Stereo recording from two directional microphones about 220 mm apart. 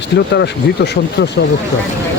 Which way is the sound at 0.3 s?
50° left (ahead or behind).